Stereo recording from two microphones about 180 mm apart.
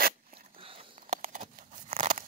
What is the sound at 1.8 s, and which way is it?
Crumpling, 30° right (ahead or behind).